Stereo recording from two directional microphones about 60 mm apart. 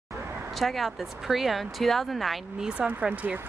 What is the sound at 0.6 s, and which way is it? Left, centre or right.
Speech, centre.